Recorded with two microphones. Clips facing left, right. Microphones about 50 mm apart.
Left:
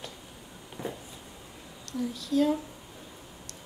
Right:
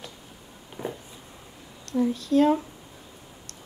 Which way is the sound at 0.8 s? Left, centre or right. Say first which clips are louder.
Right 3 dB; right.